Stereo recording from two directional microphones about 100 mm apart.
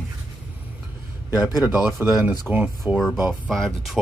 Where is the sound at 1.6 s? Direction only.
10° right (ahead or behind).